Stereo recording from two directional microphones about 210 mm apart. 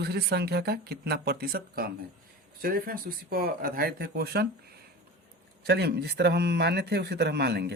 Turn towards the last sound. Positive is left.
turn(degrees=-50)  # may be behind; listen again after turning